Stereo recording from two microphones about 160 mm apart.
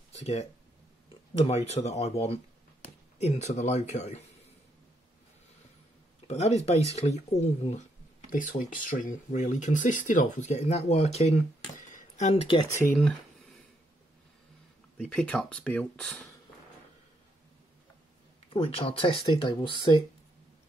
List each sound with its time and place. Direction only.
0.2 s speech: 45° left (ahead or behind)
6.2 s speech: 45° left (ahead or behind)
8.3 s speech: 55° left (ahead or behind); by 11.4 s 40° left (ahead or behind)
11.7 s a sound: 50° left (ahead or behind)
13.0 s a sound: 5° left (ahead or behind)
15.0 s speech: 5° left (ahead or behind)
18.5 s speech: 35° left (ahead or behind)